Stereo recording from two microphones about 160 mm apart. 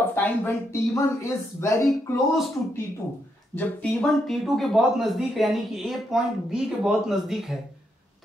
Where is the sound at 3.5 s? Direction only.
Centre (ahead or behind).